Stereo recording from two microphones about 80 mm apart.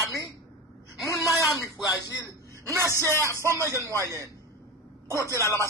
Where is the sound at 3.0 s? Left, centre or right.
Left.